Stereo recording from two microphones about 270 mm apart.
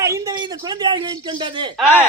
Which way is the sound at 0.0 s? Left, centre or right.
Centre.